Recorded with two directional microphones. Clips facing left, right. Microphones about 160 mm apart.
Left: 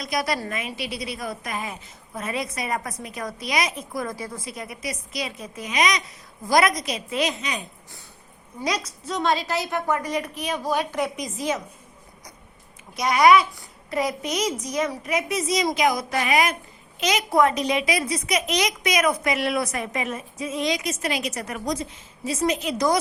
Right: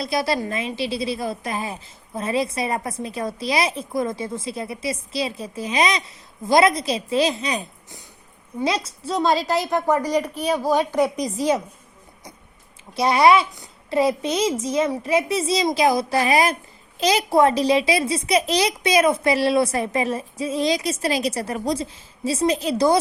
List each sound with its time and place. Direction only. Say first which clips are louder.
0.0 s a woman's voice: right 4 dB; 30° right (ahead or behind)
13.0 s a woman's voice: right 1 dB; 30° right (ahead or behind)